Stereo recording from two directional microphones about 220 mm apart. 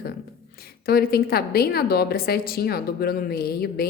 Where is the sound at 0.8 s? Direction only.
45° left (ahead or behind).